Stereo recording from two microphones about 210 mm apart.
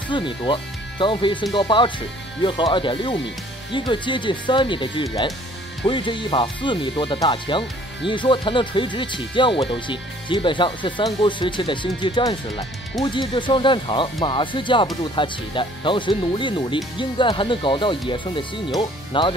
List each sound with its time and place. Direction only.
0.1 s speech: 25° left (ahead or behind)